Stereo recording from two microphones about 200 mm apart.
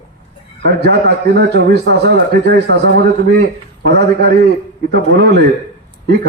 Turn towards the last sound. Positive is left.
turn(degrees=-60)  # may be behind; listen again after turning